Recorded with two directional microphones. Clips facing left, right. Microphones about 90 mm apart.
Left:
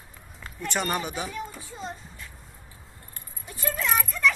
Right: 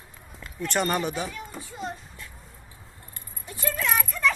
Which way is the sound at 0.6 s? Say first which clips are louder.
Right 3 dB; centre (ahead or behind).